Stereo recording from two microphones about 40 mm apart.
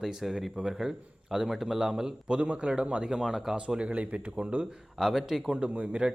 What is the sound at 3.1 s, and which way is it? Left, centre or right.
Speech, centre.